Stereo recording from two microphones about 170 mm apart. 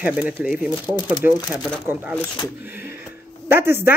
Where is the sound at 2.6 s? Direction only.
10° right (ahead or behind).